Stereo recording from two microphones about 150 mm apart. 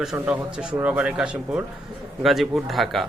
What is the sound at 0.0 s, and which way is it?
A man's voice, 5° right (ahead or behind).